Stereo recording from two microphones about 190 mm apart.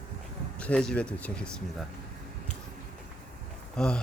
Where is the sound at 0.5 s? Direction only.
5° left (ahead or behind).